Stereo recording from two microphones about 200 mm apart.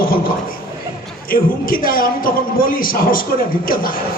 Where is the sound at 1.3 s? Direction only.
45° left (ahead or behind).